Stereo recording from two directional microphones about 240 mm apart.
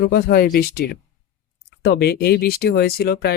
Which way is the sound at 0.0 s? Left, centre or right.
Left.